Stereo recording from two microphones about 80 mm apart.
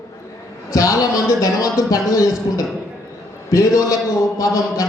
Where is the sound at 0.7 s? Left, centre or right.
Left.